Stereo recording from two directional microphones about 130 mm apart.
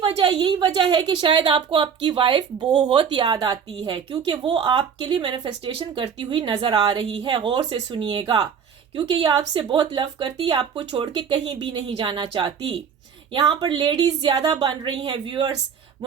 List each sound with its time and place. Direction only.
0.0 s a woman's voice: 40° right (ahead or behind)